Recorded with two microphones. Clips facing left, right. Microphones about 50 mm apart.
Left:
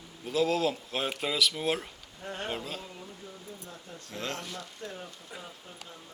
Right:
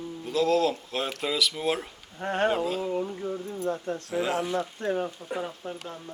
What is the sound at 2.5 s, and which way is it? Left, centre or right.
Speech, centre.